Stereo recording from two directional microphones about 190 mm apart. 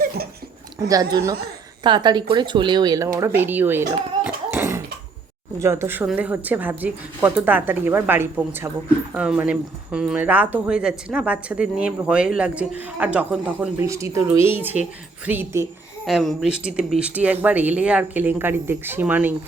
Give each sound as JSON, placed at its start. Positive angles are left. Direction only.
{"t": 0.8, "sound": "a woman's voice", "side_deg": -20}